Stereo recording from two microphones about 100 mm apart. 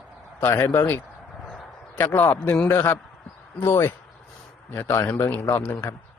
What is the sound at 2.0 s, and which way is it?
A man's voice, 20° left (ahead or behind).